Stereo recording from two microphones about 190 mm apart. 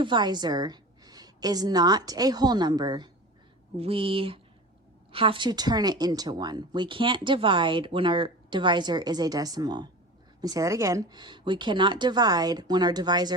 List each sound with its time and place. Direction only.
0.0 s speech: 25° right (ahead or behind)